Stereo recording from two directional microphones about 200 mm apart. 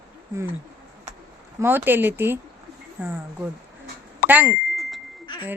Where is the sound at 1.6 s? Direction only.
10° right (ahead or behind).